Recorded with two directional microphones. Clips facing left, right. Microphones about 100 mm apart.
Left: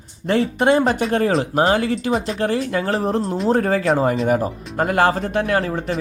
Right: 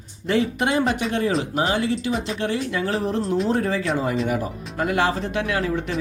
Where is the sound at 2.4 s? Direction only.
45° left (ahead or behind).